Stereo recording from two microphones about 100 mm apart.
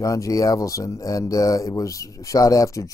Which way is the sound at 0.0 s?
35° left (ahead or behind).